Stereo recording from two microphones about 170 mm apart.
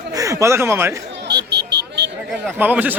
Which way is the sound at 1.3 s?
85° right.